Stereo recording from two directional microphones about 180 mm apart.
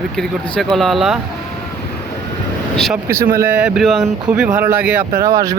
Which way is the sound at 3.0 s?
55° right (ahead or behind).